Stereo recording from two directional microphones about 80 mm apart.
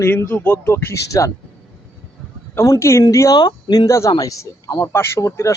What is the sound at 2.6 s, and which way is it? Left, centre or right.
Speech, left.